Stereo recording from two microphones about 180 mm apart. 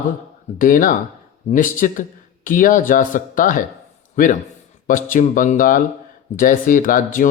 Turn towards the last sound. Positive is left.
turn(degrees=50)  # may be behind; listen again after turning